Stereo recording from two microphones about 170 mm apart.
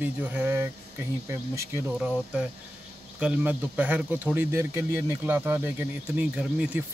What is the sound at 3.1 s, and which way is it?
Speech, 5° right (ahead or behind).